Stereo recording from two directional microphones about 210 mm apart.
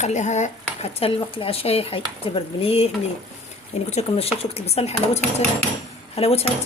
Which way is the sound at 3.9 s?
30° left (ahead or behind).